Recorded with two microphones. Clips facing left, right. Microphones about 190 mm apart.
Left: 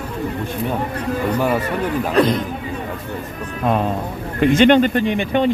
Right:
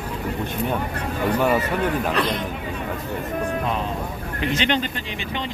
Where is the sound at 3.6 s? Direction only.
50° left (ahead or behind).